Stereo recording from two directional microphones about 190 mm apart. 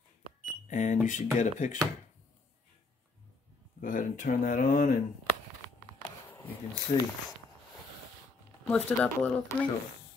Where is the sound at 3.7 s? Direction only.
45° left (ahead or behind).